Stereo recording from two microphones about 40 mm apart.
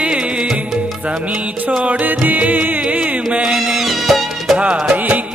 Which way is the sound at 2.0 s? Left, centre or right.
Right.